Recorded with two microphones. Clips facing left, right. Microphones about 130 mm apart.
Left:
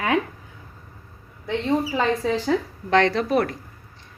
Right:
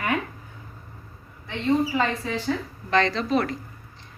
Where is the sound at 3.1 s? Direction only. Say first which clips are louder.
Left 3 dB; 55° left (ahead or behind).